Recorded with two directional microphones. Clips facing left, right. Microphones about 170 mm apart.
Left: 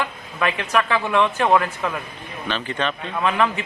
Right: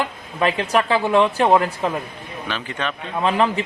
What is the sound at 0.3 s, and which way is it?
Speech, 30° right (ahead or behind).